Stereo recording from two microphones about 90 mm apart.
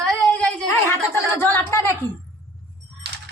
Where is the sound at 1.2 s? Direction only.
25° left (ahead or behind).